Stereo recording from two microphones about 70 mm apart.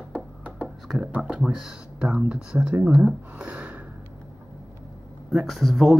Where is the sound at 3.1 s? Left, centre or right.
Centre.